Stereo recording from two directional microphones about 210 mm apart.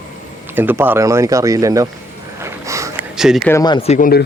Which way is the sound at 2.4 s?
15° right (ahead or behind).